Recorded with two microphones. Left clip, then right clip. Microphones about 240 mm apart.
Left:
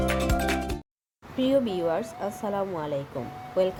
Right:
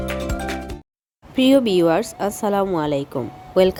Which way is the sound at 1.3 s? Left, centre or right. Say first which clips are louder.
Right 9 dB; right.